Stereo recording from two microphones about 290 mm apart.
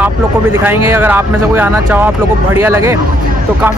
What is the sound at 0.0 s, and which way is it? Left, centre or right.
Speech, centre.